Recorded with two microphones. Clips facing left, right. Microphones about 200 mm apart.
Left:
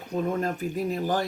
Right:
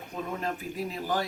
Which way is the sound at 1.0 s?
50° left (ahead or behind).